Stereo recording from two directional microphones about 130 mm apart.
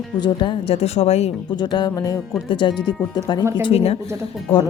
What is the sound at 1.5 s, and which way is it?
Speech, 35° left (ahead or behind).